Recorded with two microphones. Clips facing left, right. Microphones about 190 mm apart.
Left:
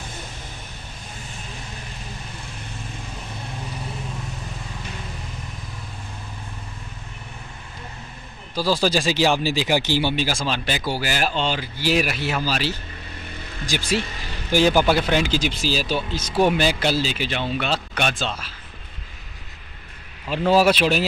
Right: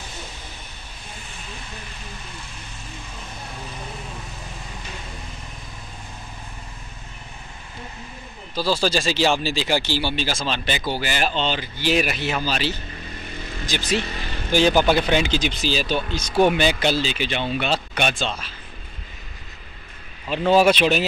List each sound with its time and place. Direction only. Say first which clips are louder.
8.5 s speech: left 1 dB; 10° left (ahead or behind)
20.2 s speech: right 1 dB; 5° left (ahead or behind)